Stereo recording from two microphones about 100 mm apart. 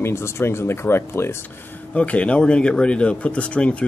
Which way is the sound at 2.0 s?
10° left (ahead or behind).